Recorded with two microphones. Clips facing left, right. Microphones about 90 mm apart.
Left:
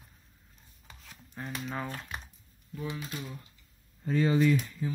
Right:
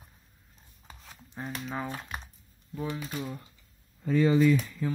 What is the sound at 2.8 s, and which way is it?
Speech, 35° right (ahead or behind).